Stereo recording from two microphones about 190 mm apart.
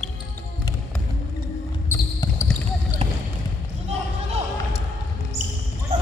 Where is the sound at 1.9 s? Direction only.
15° left (ahead or behind).